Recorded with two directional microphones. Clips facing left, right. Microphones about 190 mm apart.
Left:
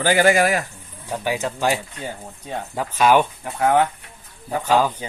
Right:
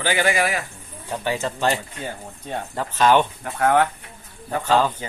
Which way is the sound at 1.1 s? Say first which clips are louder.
Left 1 dB; 10° left (ahead or behind).